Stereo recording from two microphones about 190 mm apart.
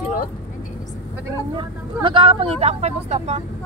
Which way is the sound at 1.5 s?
25° right (ahead or behind).